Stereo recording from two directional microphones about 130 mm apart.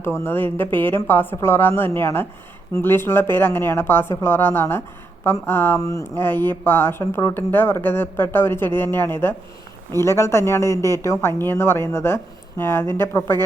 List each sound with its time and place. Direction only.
0.0 s speech: 15° left (ahead or behind)